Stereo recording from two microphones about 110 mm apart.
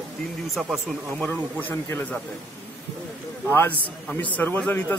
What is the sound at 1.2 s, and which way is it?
Speech, 15° left (ahead or behind).